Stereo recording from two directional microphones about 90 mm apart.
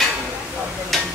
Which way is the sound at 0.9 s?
Centre (ahead or behind).